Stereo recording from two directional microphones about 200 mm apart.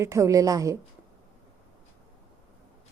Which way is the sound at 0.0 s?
15° right (ahead or behind).